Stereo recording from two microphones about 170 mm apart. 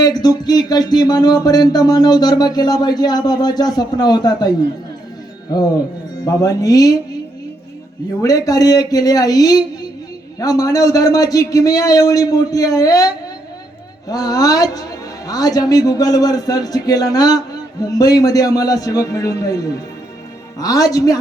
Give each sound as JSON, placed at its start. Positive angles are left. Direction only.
{"t": 0.0, "sound": "a man's voice", "side_deg": 25}
{"t": 6.2, "sound": "a man's voice", "side_deg": 20}
{"t": 8.2, "sound": "a man's voice", "side_deg": 20}